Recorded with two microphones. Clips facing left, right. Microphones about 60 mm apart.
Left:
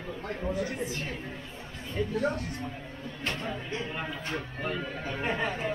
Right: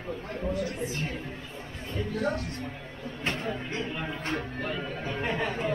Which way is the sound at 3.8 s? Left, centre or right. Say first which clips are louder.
Right 2 dB; centre.